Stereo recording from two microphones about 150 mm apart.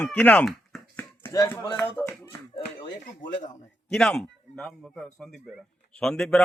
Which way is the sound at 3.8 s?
5° left (ahead or behind).